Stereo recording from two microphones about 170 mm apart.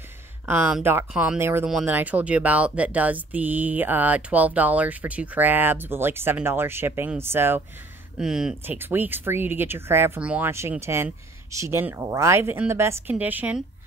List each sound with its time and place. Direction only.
0.5 s speech: 10° right (ahead or behind)